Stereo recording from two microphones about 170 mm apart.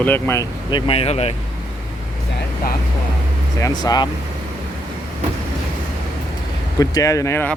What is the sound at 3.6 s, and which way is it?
Speech, 20° left (ahead or behind).